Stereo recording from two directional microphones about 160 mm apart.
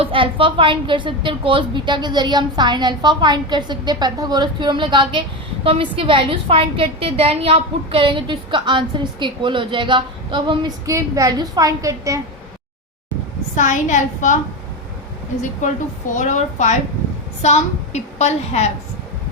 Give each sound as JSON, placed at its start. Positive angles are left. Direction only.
{"t": 0.0, "sound": "a woman's voice", "side_deg": -35}
{"t": 13.6, "sound": "a woman's voice", "side_deg": 50}
{"t": 15.4, "sound": "a woman's voice", "side_deg": 50}